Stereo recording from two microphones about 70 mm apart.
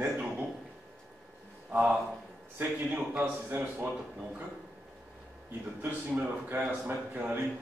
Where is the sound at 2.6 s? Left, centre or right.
Right.